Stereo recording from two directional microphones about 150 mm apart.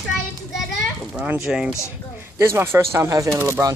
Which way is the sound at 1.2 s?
5° right (ahead or behind).